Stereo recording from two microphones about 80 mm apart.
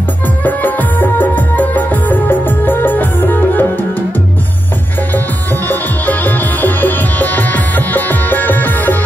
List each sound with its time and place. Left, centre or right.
0.4 s music: left
5.7 s music: left